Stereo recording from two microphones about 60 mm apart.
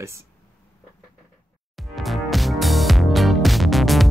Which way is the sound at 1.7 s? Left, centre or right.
Centre.